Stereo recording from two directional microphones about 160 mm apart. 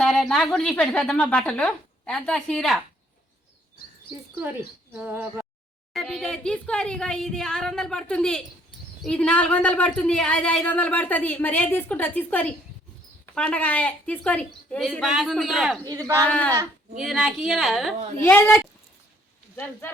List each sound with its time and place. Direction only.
0.0 s a woman's voice: centre (ahead or behind)
4.9 s speech: 10° right (ahead or behind)
5.9 s a woman's voice: 5° left (ahead or behind)
15.8 s speech: 25° right (ahead or behind)
16.1 s speech: 10° left (ahead or behind)
17.0 s a woman's voice: 5° right (ahead or behind)
18.2 s speech: 15° left (ahead or behind)